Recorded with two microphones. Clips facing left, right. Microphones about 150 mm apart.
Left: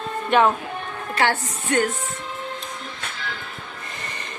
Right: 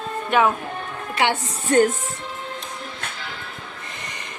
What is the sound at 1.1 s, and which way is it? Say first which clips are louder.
Speech: even; 20° right (ahead or behind).